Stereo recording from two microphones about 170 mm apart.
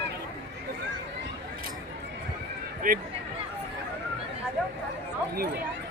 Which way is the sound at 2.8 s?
55° right (ahead or behind).